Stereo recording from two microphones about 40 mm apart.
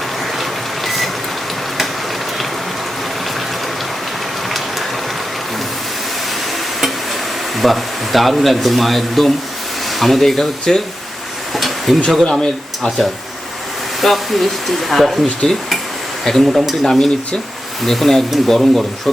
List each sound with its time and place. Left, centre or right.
0.9 s vehicle: centre
7.5 s speech: centre
11.5 s a sound: centre
12.2 s speech: centre
14.0 s speech: centre
16.8 s speech: centre